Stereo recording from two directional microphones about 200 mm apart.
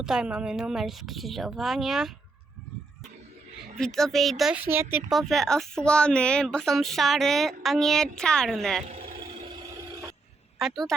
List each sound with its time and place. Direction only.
0.0 s speech: 5° right (ahead or behind)
3.8 s speech: 5° left (ahead or behind)
5.1 s speech: centre (ahead or behind)
8.9 s vehicle: 30° right (ahead or behind)
10.6 s speech: centre (ahead or behind)